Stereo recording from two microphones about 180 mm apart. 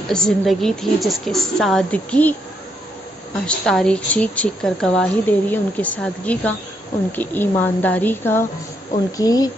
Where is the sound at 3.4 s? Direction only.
5° left (ahead or behind); by 9.5 s 20° left (ahead or behind).